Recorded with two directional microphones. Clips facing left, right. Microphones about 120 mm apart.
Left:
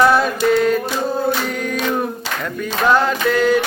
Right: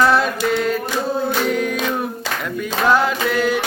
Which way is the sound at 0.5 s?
Centre (ahead or behind).